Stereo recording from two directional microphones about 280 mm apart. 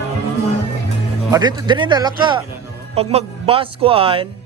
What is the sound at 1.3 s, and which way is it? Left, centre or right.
Speech, centre.